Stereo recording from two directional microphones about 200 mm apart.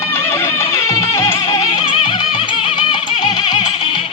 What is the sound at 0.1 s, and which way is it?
Music, 10° left (ahead or behind).